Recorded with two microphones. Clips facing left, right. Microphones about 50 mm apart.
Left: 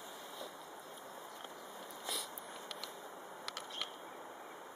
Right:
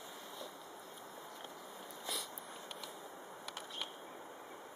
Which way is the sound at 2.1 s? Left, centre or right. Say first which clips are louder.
Even; centre.